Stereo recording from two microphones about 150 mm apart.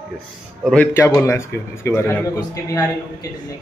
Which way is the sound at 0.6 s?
5° left (ahead or behind).